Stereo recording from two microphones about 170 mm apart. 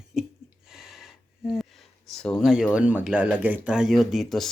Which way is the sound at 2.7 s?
10° right (ahead or behind).